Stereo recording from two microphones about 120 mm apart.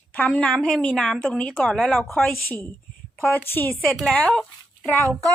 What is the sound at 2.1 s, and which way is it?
A woman's voice, 15° left (ahead or behind).